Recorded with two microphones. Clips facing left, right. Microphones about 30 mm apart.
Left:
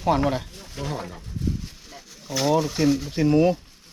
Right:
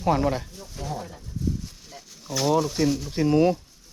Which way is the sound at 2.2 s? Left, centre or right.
Centre.